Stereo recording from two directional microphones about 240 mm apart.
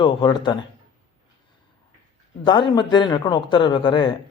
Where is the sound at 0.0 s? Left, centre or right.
Centre.